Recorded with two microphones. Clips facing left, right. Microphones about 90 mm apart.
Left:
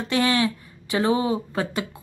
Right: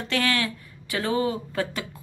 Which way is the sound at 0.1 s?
20° left (ahead or behind).